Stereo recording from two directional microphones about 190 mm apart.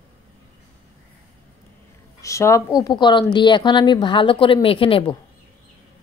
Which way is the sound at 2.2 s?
15° left (ahead or behind).